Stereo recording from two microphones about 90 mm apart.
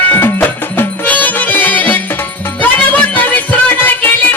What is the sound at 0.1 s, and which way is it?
Music, 20° left (ahead or behind).